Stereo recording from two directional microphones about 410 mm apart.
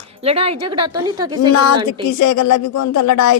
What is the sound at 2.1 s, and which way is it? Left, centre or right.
Speech, left.